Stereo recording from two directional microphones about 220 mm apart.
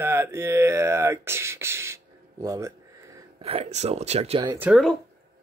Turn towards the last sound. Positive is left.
turn(degrees=-5)  # may be behind; listen again after turning